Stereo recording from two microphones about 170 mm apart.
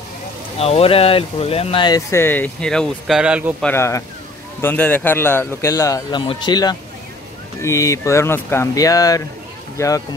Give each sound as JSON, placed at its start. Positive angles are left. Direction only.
{"t": 0.6, "sound": "speech", "side_deg": 35}
{"t": 3.6, "sound": "a man's voice", "side_deg": 15}